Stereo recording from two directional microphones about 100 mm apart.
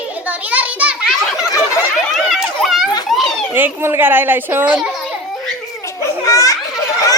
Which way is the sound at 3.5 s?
25° right (ahead or behind).